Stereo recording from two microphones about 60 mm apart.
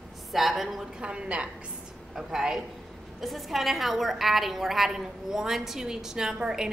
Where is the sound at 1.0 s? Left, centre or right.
Centre.